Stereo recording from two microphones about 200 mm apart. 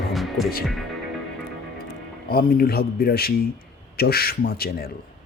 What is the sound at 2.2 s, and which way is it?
Speech, 50° left (ahead or behind).